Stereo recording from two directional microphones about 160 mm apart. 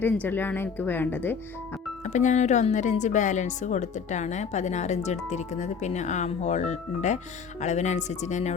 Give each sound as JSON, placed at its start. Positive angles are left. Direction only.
{"t": 0.0, "sound": "speech", "side_deg": 10}
{"t": 2.0, "sound": "speech", "side_deg": 50}